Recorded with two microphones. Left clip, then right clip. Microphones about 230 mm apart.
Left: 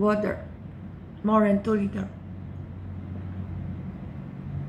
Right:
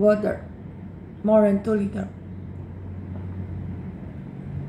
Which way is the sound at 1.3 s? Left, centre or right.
Centre.